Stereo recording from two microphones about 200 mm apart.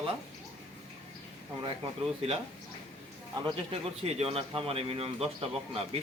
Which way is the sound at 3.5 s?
30° right (ahead or behind).